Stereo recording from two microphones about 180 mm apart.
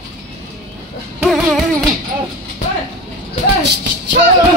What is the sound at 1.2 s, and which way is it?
Music, centre (ahead or behind).